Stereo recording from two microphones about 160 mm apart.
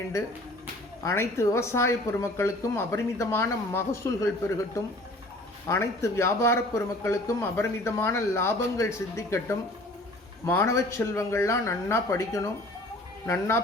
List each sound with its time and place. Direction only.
1.0 s a man's voice: 15° left (ahead or behind)